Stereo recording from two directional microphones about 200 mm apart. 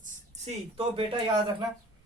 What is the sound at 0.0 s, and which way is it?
Speech, 30° right (ahead or behind).